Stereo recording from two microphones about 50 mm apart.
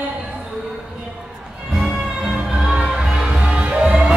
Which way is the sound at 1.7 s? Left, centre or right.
Centre.